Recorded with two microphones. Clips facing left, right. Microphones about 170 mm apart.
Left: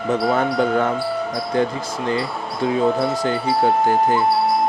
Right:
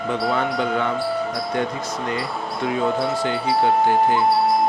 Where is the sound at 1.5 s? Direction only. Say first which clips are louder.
Left 5 dB; 30° left (ahead or behind).